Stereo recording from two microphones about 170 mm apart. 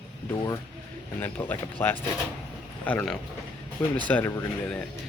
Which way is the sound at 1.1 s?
10° left (ahead or behind).